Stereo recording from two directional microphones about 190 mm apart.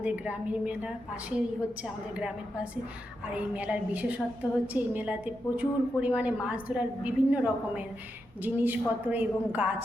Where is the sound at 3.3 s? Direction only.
5° right (ahead or behind).